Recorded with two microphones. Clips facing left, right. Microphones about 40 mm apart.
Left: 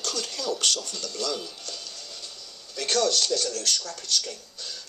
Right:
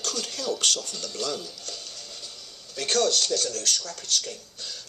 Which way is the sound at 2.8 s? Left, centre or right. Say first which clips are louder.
Even; right.